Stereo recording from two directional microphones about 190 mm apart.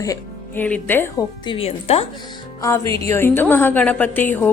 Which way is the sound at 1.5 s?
30° left (ahead or behind).